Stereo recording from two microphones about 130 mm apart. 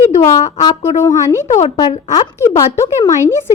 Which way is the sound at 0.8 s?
20° left (ahead or behind).